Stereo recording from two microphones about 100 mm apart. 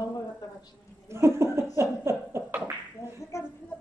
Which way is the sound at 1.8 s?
25° right (ahead or behind).